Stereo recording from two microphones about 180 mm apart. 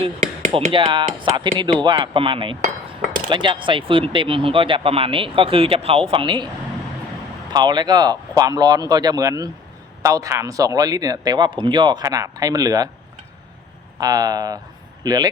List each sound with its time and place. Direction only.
0.0 s speech: 30° right (ahead or behind)
7.5 s speech: 25° right (ahead or behind)
14.0 s speech: 20° right (ahead or behind)